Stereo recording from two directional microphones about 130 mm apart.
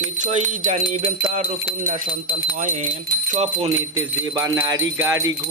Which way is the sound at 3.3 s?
60° right (ahead or behind).